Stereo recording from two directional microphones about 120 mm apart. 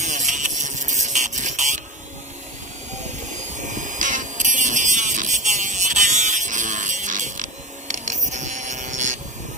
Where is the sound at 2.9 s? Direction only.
75° right (ahead or behind).